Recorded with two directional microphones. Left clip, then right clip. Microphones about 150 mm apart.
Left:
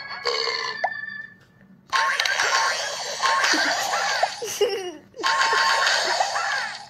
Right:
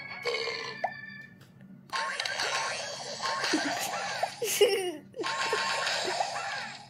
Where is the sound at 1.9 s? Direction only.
5° left (ahead or behind).